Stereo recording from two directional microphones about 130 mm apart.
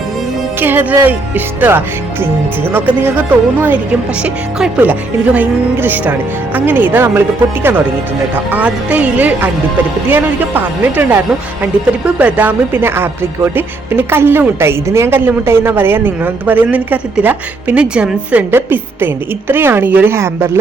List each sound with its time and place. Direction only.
0.6 s speech: 15° right (ahead or behind)